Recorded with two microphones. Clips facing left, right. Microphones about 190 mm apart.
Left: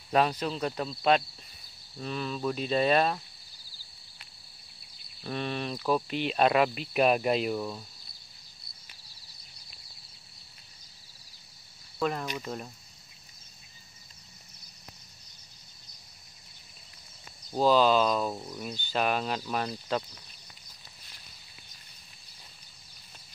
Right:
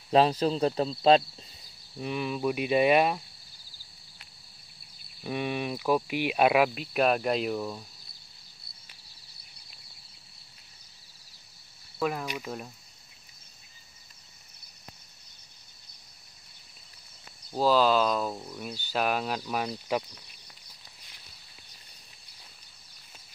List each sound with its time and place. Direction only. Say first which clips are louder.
0.1 s speech: right 4 dB; 30° right (ahead or behind)
2.0 s speech: right 3 dB; 15° right (ahead or behind)
5.2 s speech: right 2 dB; 10° right (ahead or behind)
12.0 s speech: even; 5° right (ahead or behind)
17.6 s speech: left 1 dB; 5° right (ahead or behind)
18.6 s speech: even; 10° right (ahead or behind)